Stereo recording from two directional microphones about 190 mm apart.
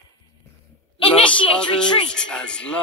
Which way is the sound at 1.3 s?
5° left (ahead or behind).